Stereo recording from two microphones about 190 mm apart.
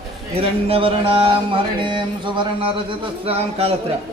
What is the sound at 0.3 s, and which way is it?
Speech, 30° right (ahead or behind).